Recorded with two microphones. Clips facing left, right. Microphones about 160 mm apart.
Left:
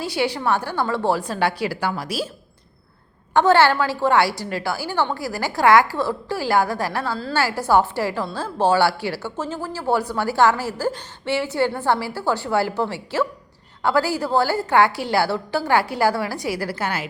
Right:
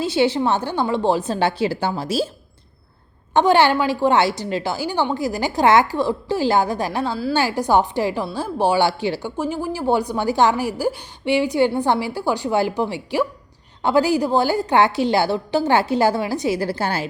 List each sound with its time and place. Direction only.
0.0 s a woman's voice: 25° right (ahead or behind)
3.3 s a woman's voice: 15° right (ahead or behind)